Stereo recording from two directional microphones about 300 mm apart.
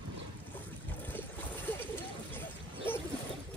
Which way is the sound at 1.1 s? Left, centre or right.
Centre.